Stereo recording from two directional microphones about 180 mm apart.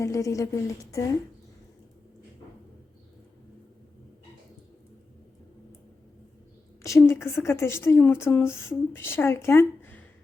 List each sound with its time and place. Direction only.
0.0 s a woman's voice: 15° left (ahead or behind)
6.8 s a woman's voice: 15° left (ahead or behind)